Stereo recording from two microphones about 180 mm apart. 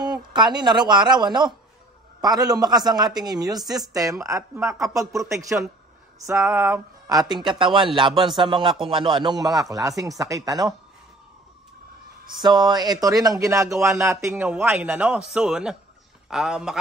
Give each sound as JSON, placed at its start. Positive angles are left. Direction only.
{"t": 0.0, "sound": "speech", "side_deg": -25}
{"t": 12.3, "sound": "a man's voice", "side_deg": -25}